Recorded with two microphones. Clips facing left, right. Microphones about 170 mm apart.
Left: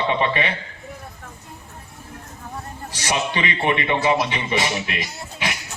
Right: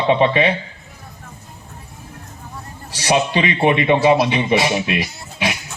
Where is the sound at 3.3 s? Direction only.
20° right (ahead or behind).